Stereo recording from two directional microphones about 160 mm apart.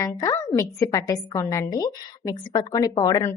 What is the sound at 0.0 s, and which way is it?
A woman's voice, 20° left (ahead or behind).